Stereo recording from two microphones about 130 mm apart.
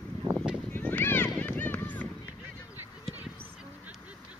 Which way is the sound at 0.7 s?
15° left (ahead or behind).